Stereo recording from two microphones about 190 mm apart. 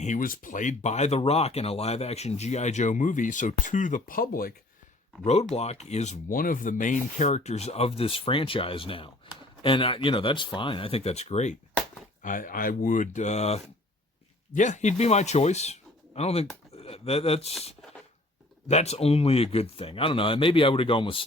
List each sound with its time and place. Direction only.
0.0 s speech: 45° left (ahead or behind)
5.2 s speech: 35° left (ahead or behind)
12.2 s speech: 45° left (ahead or behind)
18.7 s speech: 35° left (ahead or behind)